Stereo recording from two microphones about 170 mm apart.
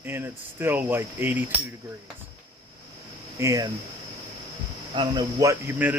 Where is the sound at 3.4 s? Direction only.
20° right (ahead or behind).